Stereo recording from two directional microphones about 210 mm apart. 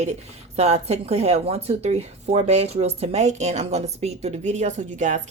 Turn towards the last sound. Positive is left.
turn(degrees=-35)  # may be behind; listen again after turning